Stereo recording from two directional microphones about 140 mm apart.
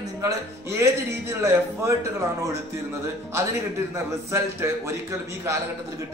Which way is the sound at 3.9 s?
20° right (ahead or behind).